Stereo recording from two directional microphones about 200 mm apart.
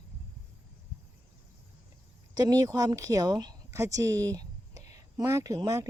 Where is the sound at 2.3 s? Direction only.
20° right (ahead or behind).